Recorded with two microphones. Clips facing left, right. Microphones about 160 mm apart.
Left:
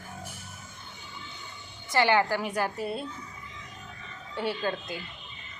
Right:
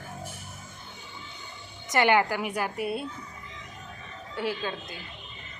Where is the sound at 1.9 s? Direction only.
20° right (ahead or behind).